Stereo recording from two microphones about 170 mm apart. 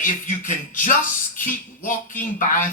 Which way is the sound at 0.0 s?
50° left (ahead or behind).